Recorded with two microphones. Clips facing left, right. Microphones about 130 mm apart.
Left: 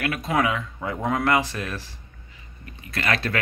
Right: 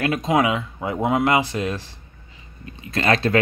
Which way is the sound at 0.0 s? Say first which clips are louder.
Right 4 dB; 20° right (ahead or behind).